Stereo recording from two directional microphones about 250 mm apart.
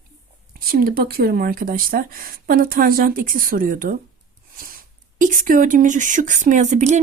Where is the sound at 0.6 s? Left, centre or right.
Right.